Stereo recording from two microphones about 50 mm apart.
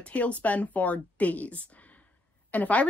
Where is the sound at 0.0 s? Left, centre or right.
Left.